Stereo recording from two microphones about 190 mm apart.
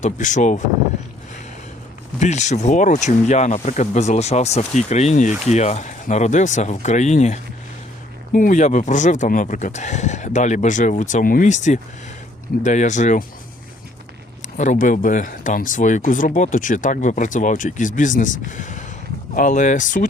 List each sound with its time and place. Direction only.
0.0 s speech: 40° left (ahead or behind)
2.1 s speech: 35° left (ahead or behind)
14.4 s speech: 40° left (ahead or behind)